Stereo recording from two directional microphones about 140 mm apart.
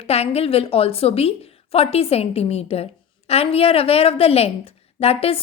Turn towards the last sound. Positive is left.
turn(degrees=45)  # may be behind; listen again after turning